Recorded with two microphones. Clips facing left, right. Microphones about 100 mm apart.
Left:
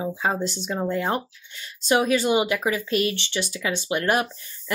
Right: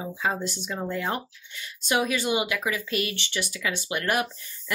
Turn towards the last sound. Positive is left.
turn(degrees=30)  # may be behind; listen again after turning